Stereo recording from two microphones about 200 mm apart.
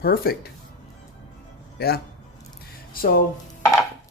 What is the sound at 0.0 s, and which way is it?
Speech, 50° left (ahead or behind).